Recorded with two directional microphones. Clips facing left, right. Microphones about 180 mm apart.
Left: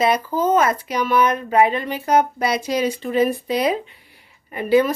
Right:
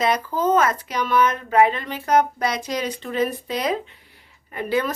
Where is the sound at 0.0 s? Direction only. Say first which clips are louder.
Left 2 dB; 10° left (ahead or behind).